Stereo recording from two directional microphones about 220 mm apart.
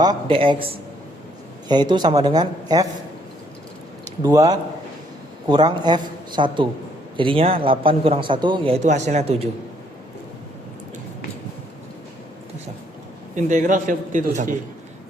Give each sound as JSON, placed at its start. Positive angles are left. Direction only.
{"t": 0.0, "sound": "a man's voice", "side_deg": -20}
{"t": 4.2, "sound": "a man's voice", "side_deg": -15}
{"t": 13.3, "sound": "a man's voice", "side_deg": -35}